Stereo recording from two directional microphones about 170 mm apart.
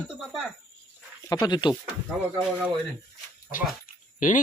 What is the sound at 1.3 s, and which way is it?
Speech, 25° left (ahead or behind).